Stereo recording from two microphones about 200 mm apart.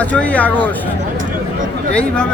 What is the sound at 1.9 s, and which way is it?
Speech, 5° left (ahead or behind).